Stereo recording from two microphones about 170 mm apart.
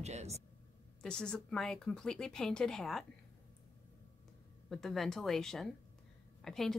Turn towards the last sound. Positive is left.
turn(degrees=0)  # may be behind; listen again after turning